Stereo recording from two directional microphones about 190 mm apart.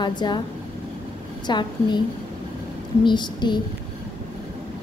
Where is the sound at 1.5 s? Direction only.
25° left (ahead or behind).